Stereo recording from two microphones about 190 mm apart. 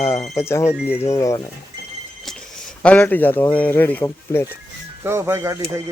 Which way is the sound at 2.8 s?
10° left (ahead or behind).